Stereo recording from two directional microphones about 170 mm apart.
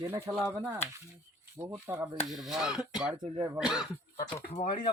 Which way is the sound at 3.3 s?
20° right (ahead or behind).